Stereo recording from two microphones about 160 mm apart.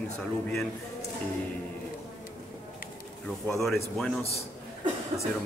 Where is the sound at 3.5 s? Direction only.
Centre (ahead or behind).